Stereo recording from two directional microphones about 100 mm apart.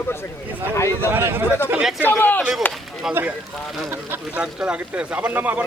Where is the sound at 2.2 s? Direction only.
20° left (ahead or behind).